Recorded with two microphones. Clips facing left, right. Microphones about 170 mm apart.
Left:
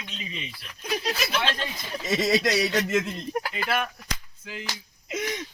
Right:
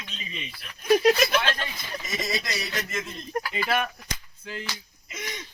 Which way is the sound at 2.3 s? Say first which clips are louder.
Left 11 dB; 75° left (ahead or behind).